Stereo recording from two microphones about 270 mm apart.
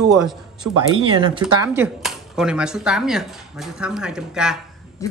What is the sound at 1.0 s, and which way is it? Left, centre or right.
Speech, centre.